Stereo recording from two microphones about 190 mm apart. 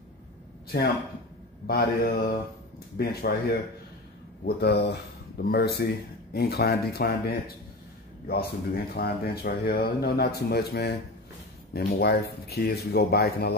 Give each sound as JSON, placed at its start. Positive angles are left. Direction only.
{"t": 1.7, "sound": "speech", "side_deg": 55}
{"t": 4.5, "sound": "speech", "side_deg": 60}